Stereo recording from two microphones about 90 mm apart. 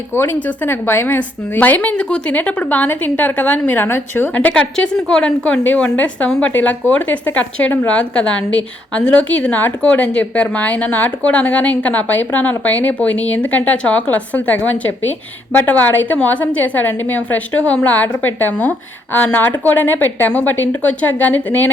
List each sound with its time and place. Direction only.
0.1 s a woman's voice: 20° left (ahead or behind)